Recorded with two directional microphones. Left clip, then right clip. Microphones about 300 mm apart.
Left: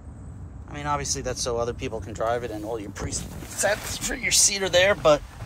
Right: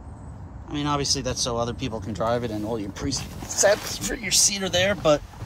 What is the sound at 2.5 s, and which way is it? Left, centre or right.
Speech, right.